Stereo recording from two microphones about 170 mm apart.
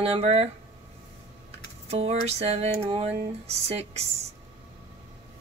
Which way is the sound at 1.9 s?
35° right (ahead or behind).